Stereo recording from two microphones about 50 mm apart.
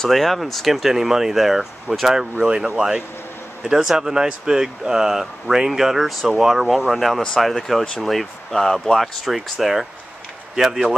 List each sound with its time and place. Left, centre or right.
0.0 s speech: centre